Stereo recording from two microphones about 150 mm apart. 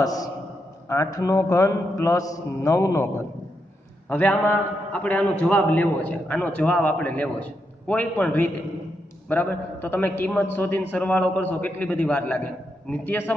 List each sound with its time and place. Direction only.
0.0 s a man's voice: 25° left (ahead or behind)
4.1 s a man's voice: 10° left (ahead or behind)